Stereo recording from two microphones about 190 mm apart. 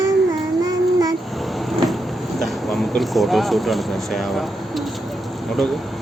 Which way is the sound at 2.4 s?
Centre (ahead or behind).